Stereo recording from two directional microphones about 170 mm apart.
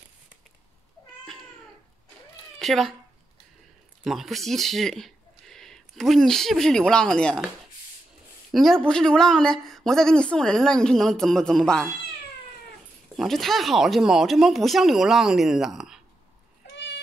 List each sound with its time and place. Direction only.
2.6 s speech: centre (ahead or behind)
4.0 s speech: centre (ahead or behind)
8.5 s speech: centre (ahead or behind)
13.1 s speech: centre (ahead or behind)
16.7 s a sound: 90° left